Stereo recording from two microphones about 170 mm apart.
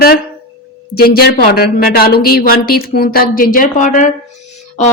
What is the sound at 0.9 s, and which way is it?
Speech, 65° left (ahead or behind).